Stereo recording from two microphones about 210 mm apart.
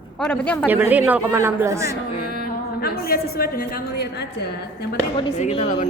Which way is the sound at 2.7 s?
45° left (ahead or behind).